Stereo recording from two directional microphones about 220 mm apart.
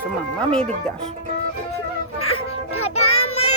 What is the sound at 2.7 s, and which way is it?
Child singing, 75° left (ahead or behind).